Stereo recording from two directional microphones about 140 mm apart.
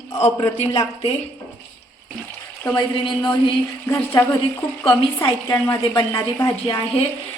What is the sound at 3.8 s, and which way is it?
Speech, 20° left (ahead or behind).